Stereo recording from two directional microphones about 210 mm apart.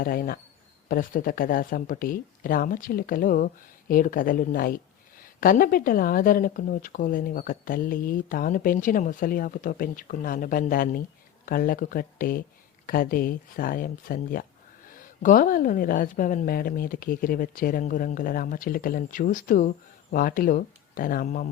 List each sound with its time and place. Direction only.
0.0 s a woman's voice: 45° left (ahead or behind)